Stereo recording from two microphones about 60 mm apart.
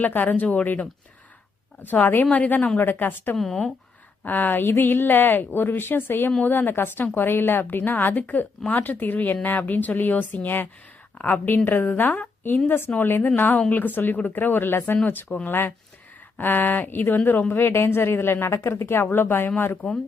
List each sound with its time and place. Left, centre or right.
0.0 s a woman's voice: left
3.3 s speech: centre
4.2 s a woman's voice: left